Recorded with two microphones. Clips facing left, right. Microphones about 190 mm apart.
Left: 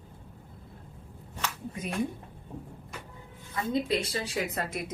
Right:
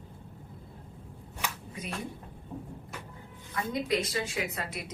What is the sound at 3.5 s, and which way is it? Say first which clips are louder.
A woman's voice: left 2 dB; 30° left (ahead or behind).